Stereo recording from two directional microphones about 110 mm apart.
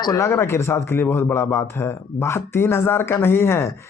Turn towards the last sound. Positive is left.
turn(degrees=25)  # may be behind; listen again after turning